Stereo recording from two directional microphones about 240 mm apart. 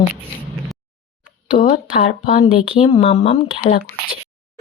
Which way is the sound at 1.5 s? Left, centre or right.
Left.